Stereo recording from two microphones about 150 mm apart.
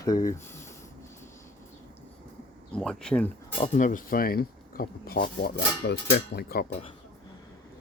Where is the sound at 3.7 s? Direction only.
60° left (ahead or behind); by 6.7 s 90° left.